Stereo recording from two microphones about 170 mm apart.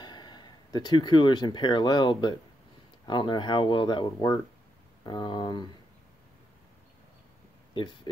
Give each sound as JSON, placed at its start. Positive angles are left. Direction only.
{"t": 0.0, "sound": "speech", "side_deg": 25}
{"t": 7.7, "sound": "speech", "side_deg": 25}